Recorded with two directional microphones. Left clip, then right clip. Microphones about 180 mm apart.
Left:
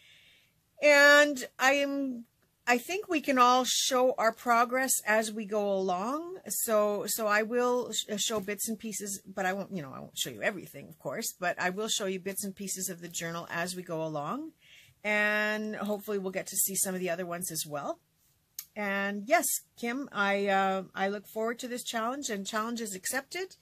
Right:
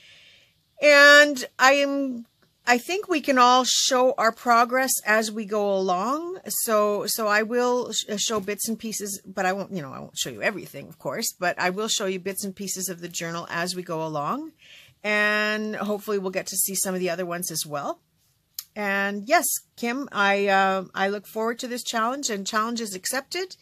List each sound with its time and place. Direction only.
0.7 s speech: 35° right (ahead or behind)